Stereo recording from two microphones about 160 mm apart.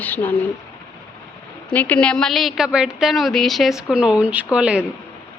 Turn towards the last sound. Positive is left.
turn(degrees=-5)  # may be behind; listen again after turning